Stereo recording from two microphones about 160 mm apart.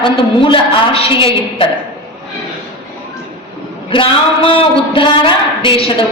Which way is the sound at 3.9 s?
35° left (ahead or behind).